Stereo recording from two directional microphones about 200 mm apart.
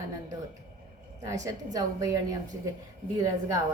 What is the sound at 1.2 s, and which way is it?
A woman's voice, 15° right (ahead or behind).